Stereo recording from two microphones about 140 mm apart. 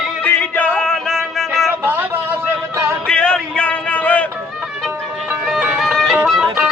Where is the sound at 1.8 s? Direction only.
15° right (ahead or behind).